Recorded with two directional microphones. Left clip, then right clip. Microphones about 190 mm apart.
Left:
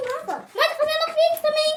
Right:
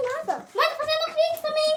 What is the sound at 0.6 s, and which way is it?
A child's voice, 25° left (ahead or behind).